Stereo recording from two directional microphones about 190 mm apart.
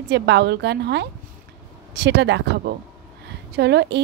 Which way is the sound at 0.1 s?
60° right (ahead or behind).